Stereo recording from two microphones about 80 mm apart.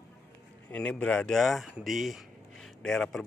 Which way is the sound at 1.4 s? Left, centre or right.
Centre.